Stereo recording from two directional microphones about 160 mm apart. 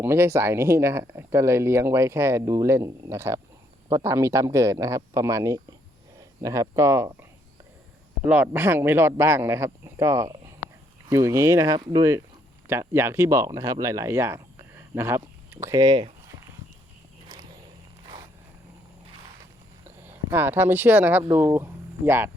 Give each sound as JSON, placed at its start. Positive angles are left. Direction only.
{"t": 0.0, "sound": "speech", "side_deg": -15}
{"t": 8.3, "sound": "speech", "side_deg": -10}
{"t": 19.8, "sound": "speech", "side_deg": -15}